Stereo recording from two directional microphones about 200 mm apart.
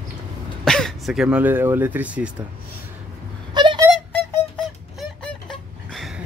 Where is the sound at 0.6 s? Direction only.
Centre (ahead or behind).